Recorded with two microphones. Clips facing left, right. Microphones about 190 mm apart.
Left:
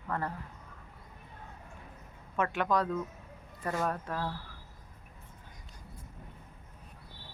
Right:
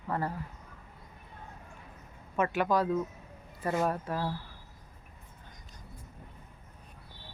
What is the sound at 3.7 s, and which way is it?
Speech, 20° right (ahead or behind).